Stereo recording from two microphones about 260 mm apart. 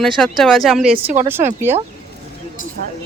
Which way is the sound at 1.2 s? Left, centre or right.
Right.